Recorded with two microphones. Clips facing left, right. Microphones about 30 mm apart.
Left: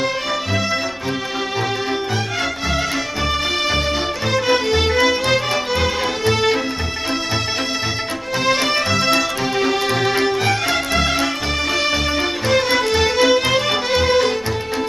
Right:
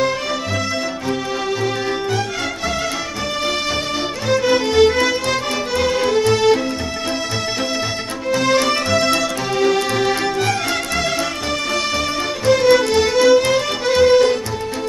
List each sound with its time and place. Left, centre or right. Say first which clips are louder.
4.3 s music: right 2 dB; centre
8.3 s music: right 3 dB; centre